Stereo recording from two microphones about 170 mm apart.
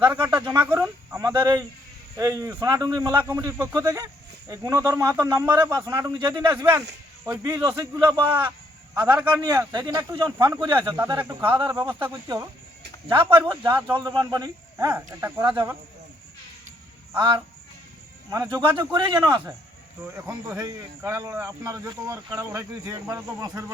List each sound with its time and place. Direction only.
0.0 s speech: 25° right (ahead or behind)
0.5 s speech: 10° right (ahead or behind); by 10.9 s 30° right (ahead or behind)
11.2 s speech: 10° right (ahead or behind)
11.5 s speech: 30° right (ahead or behind)
11.8 s speech: 15° right (ahead or behind)
13.9 s speech: 25° right (ahead or behind)
17.2 s speech: 25° right (ahead or behind)